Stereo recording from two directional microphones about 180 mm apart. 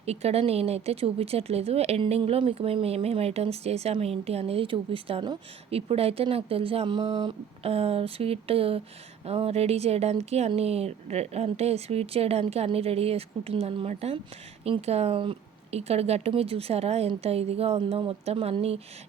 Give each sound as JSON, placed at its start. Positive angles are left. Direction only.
{"t": 0.0, "sound": "speech", "side_deg": -35}